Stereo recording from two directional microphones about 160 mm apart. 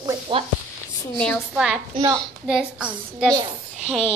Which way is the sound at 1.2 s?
5° left (ahead or behind).